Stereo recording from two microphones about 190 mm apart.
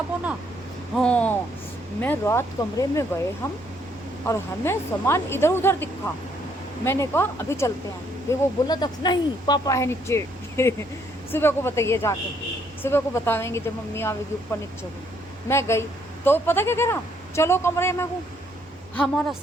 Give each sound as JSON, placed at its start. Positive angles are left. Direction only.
{"t": 0.9, "sound": "speech", "side_deg": 5}
{"t": 4.3, "sound": "speech", "side_deg": 15}
{"t": 18.9, "sound": "a woman's voice", "side_deg": 5}